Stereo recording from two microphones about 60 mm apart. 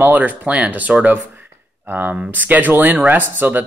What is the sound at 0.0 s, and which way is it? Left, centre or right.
Speech, right.